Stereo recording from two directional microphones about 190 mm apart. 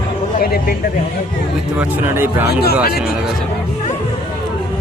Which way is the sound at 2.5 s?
55° left (ahead or behind).